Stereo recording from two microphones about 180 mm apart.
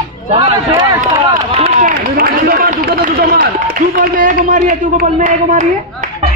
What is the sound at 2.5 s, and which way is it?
Speech, 40° right (ahead or behind).